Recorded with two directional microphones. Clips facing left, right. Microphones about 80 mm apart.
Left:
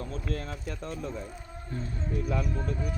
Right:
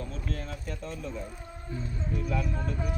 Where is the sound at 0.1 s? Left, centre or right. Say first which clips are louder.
Left 2 dB; left.